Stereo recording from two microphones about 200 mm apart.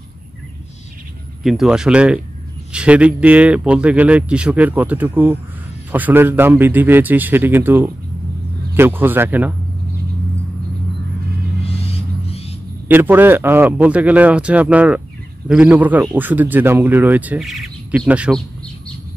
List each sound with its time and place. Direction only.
1.4 s a man's voice: centre (ahead or behind)
12.3 s a sound: 30° left (ahead or behind)
12.8 s a man's voice: 10° right (ahead or behind)